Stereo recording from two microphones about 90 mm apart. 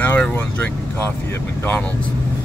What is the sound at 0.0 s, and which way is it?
Speech, 20° left (ahead or behind).